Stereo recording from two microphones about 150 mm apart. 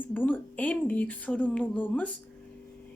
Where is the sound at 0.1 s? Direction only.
10° left (ahead or behind).